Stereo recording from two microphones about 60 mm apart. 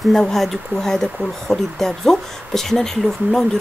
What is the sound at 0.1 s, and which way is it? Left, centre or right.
Speech, centre.